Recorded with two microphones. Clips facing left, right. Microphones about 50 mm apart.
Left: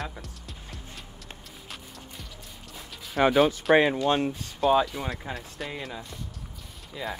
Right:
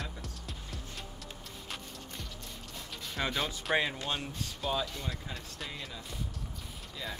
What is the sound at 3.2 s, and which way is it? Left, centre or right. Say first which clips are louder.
Speech: left 13 dB; left.